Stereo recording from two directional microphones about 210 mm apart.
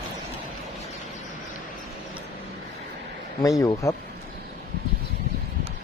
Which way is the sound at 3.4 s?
15° left (ahead or behind).